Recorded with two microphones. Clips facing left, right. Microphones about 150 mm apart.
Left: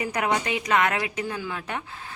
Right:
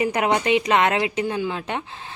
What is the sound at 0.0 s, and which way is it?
Speech, 25° right (ahead or behind).